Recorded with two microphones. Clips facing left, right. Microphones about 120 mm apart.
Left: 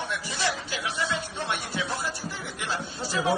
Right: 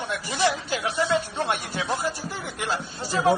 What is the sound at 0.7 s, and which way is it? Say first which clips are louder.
Speech: right 6 dB; 45° right (ahead or behind).